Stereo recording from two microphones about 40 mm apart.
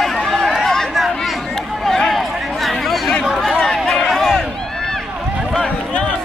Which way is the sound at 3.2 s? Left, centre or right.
Centre.